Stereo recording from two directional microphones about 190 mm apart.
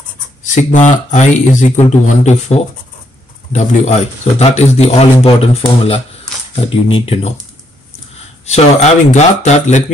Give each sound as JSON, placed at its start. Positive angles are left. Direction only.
{"t": 0.4, "sound": "a man's voice", "side_deg": 40}
{"t": 8.5, "sound": "a man's voice", "side_deg": 35}